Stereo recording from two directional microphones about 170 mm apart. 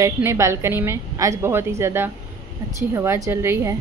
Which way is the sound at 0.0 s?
15° right (ahead or behind).